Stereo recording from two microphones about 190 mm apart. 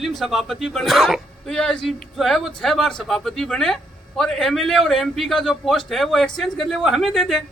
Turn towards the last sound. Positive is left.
turn(degrees=0)  # may be behind; listen again after turning